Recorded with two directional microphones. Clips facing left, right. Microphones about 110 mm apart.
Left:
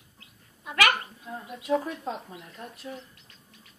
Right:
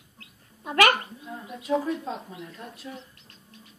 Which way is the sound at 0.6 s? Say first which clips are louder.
Right 4 dB; 35° right (ahead or behind).